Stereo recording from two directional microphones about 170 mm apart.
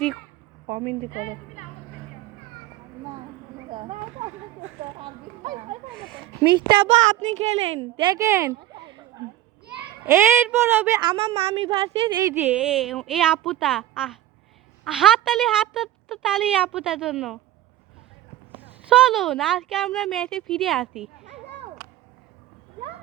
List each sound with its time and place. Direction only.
0.7 s a child's voice: 30° right (ahead or behind)
5.4 s speech: 50° right (ahead or behind)
6.4 s a child's voice: 25° right (ahead or behind)
6.8 s a child's voice: 40° right (ahead or behind)
8.0 s speech: 20° right (ahead or behind)
9.6 s a child's voice: 10° right (ahead or behind)
11.0 s a child's voice: 30° right (ahead or behind)
12.2 s speech: 10° right (ahead or behind)
18.9 s speech: 5° right (ahead or behind)